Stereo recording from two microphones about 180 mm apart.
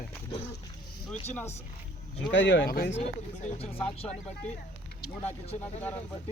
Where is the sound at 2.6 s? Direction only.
60° left (ahead or behind).